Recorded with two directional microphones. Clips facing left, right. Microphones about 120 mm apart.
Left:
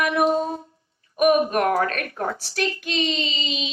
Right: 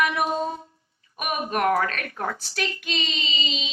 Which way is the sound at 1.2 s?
40° left (ahead or behind).